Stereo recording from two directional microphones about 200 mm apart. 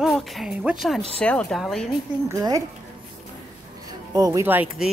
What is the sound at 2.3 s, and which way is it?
Speech, 15° right (ahead or behind).